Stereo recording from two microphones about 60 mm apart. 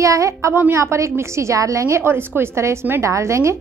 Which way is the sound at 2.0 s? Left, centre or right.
Right.